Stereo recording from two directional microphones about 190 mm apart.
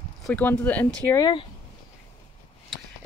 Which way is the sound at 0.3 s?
10° left (ahead or behind).